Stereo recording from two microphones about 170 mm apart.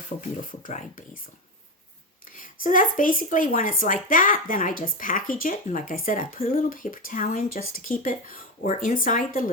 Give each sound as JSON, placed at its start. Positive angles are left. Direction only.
{"t": 0.1, "sound": "speech", "side_deg": 50}
{"t": 2.3, "sound": "speech", "side_deg": 50}